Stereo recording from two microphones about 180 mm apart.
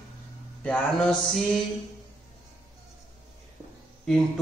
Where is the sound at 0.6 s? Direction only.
5° left (ahead or behind).